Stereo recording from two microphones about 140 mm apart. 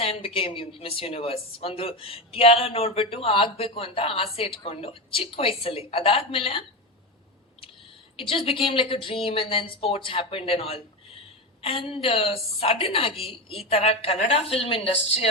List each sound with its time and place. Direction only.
0.0 s speech: 45° left (ahead or behind)
8.2 s a woman's voice: 40° left (ahead or behind)